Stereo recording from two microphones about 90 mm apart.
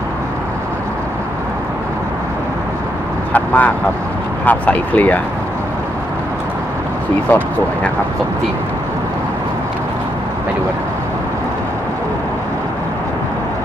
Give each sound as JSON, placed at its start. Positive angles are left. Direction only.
{"t": 3.3, "sound": "speech", "side_deg": 15}
{"t": 7.2, "sound": "speech", "side_deg": 20}